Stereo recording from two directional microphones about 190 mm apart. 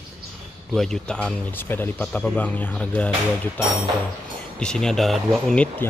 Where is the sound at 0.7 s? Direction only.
5° left (ahead or behind).